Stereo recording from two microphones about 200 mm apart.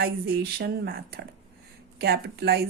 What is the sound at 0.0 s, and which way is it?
Speech, 55° right (ahead or behind).